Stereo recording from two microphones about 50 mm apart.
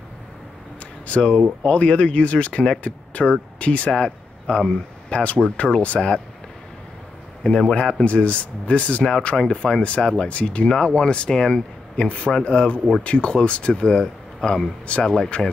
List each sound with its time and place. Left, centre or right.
1.0 s speech: left
5.9 s speech: centre
7.4 s speech: centre
12.1 s speech: left